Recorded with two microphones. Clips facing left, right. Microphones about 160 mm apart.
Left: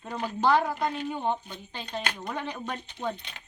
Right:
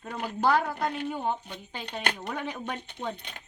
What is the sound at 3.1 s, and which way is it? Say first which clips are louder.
Speech: right 2 dB; 50° right (ahead or behind).